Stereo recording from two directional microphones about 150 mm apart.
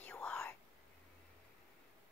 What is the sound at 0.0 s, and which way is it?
Whispering, 5° left (ahead or behind).